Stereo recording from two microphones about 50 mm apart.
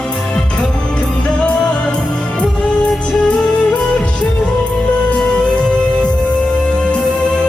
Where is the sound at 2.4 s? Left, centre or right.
Left.